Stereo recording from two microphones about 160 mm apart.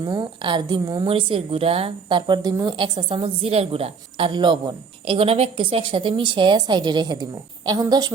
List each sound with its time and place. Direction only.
0.0 s a woman's voice: 25° right (ahead or behind)